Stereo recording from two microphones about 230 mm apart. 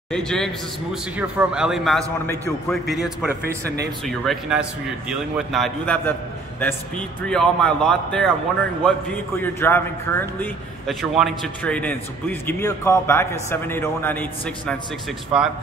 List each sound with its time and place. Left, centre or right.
0.1 s a man's voice: centre
15.3 s a man's voice: centre